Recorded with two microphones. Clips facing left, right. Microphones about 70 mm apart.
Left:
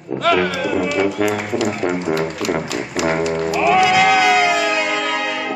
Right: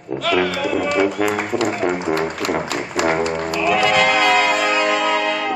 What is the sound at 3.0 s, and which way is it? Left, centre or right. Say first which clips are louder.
Music: right 1 dB; right.